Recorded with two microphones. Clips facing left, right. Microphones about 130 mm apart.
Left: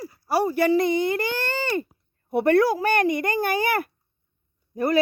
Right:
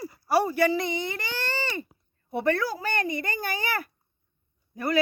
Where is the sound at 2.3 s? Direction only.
60° left (ahead or behind).